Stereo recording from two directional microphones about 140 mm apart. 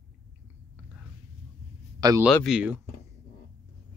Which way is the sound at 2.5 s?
10° right (ahead or behind).